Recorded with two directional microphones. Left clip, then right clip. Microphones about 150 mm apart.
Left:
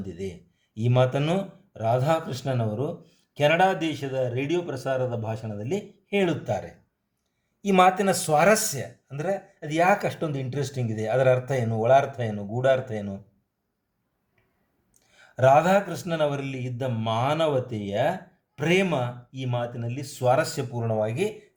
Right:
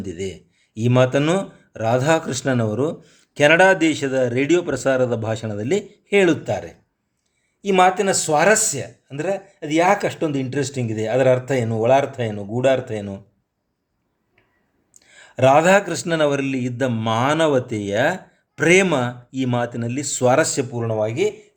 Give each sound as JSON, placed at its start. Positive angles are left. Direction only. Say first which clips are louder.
{"t": 0.0, "sound": "speech", "louder": "right 7 dB", "side_deg": -30}
{"t": 6.5, "sound": "speech", "louder": "right 4 dB", "side_deg": -20}
{"t": 15.4, "sound": "speech", "louder": "right 5 dB", "side_deg": -30}
{"t": 20.8, "sound": "speech", "louder": "right 5 dB", "side_deg": -20}